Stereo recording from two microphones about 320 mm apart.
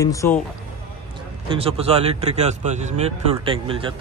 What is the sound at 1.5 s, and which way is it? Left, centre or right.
Speech, centre.